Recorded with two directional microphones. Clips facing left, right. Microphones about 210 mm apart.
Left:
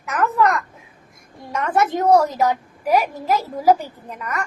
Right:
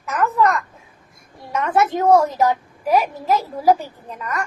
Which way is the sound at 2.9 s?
Centre (ahead or behind).